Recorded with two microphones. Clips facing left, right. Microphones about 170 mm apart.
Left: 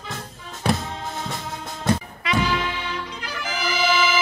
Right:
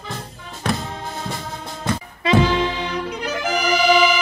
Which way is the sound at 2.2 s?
30° right (ahead or behind).